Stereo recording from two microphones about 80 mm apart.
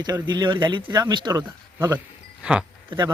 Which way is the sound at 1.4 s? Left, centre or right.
Right.